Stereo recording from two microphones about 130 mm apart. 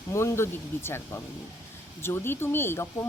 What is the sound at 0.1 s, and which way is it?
A woman's voice, 20° left (ahead or behind).